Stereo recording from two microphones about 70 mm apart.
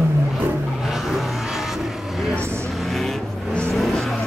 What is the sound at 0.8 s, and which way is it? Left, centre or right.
Vehicle, centre.